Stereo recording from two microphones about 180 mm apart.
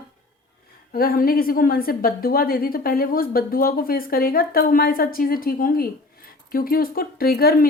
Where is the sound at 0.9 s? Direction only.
55° left (ahead or behind).